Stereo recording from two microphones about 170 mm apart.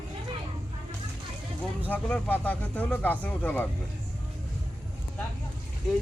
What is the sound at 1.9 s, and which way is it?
Speech, 10° left (ahead or behind).